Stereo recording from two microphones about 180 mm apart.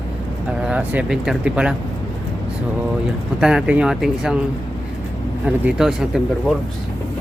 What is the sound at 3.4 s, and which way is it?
Speech, 5° right (ahead or behind).